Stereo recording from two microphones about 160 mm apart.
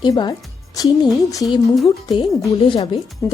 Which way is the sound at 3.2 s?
20° left (ahead or behind).